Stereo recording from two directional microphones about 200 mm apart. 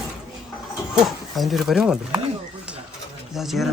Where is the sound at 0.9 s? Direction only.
Centre (ahead or behind).